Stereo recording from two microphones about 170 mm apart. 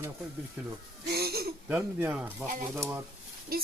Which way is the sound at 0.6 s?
10° right (ahead or behind).